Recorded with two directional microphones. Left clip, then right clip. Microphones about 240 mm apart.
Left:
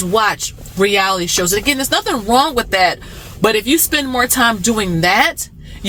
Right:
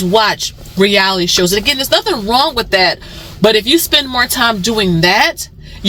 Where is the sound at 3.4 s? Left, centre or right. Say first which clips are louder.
Right 4 dB; centre.